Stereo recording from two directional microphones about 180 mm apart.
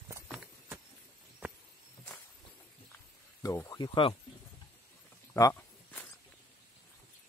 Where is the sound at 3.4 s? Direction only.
15° left (ahead or behind).